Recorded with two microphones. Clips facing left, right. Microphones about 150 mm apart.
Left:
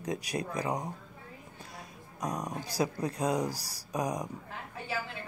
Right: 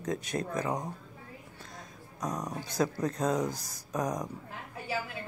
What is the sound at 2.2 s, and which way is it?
Speech, 10° left (ahead or behind).